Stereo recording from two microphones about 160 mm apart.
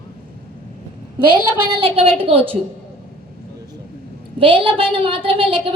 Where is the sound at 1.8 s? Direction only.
35° right (ahead or behind).